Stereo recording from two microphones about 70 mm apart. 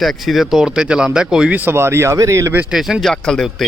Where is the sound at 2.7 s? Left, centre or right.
Centre.